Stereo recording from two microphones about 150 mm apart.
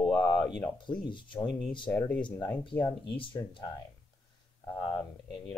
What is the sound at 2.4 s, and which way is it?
Speech, 10° left (ahead or behind).